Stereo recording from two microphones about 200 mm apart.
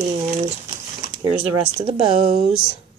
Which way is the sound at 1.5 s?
25° right (ahead or behind).